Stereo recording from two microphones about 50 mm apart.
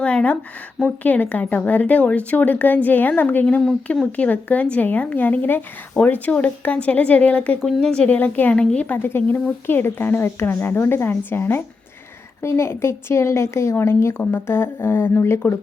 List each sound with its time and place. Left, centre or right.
0.0 s a sound: left
0.9 s a woman's voice: left
6.0 s speech: centre
6.7 s a woman's voice: left
7.8 s a woman's voice: centre
8.1 s a woman's voice: left
8.5 s a woman's voice: left
9.0 s a woman's voice: left
12.4 s a woman's voice: left